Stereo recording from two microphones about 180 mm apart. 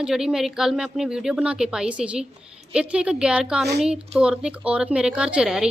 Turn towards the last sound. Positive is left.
turn(degrees=-5)  # may be behind; listen again after turning